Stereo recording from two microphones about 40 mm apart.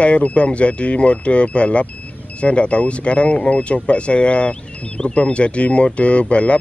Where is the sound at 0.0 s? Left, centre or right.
Left.